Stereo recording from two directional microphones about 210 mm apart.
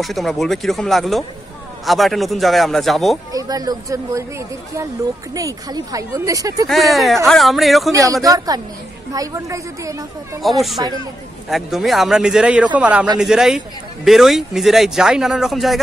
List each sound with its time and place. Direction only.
0.0 s speech: centre (ahead or behind)
3.3 s speech: 15° right (ahead or behind)
6.7 s speech: centre (ahead or behind)
7.9 s speech: 15° right (ahead or behind)
10.4 s speech: centre (ahead or behind)